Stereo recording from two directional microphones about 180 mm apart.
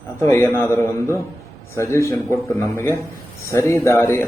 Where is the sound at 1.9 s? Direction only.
15° left (ahead or behind).